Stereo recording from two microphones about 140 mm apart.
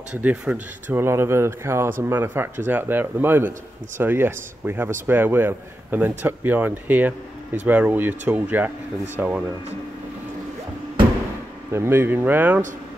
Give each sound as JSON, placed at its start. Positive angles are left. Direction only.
{"t": 0.1, "sound": "speech", "side_deg": -10}
{"t": 11.7, "sound": "speech", "side_deg": -15}